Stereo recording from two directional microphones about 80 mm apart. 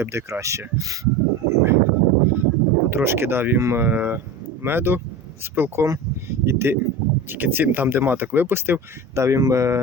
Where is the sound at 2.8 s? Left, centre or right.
Right.